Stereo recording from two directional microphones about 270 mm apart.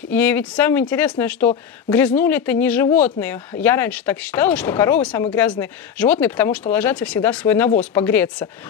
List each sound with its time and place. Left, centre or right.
0.1 s speech: centre